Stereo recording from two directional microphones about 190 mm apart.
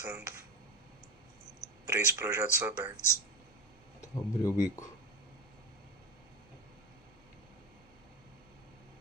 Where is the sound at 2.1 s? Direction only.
15° right (ahead or behind).